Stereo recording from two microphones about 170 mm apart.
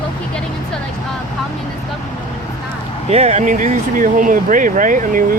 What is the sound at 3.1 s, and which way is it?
Speech, 40° right (ahead or behind).